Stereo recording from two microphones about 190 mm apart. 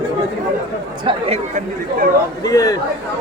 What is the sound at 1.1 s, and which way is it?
Speech, 30° right (ahead or behind).